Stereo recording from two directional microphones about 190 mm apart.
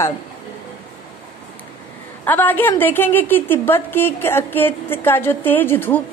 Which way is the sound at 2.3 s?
10° left (ahead or behind).